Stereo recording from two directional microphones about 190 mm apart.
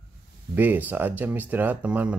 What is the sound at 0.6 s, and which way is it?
Speech, 10° right (ahead or behind).